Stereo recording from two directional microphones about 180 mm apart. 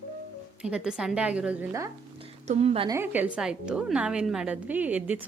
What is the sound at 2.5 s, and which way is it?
Speech, 35° right (ahead or behind).